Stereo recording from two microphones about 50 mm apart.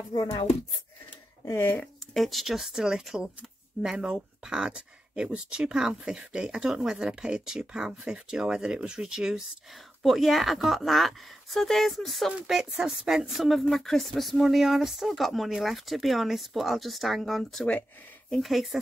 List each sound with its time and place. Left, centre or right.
1.6 s speech: left
2.1 s speech: centre
4.0 s speech: centre
10.0 s speech: centre